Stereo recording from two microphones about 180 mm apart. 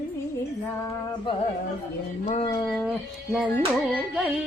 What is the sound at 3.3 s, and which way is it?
Carnatic music, centre (ahead or behind).